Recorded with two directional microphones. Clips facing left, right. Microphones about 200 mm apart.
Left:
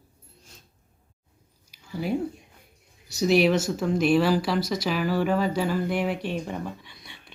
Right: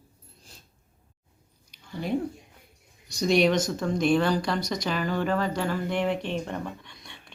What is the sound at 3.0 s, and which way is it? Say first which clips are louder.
Speech: left 1 dB; 5° left (ahead or behind).